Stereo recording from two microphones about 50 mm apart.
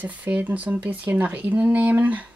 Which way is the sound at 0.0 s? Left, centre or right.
Right.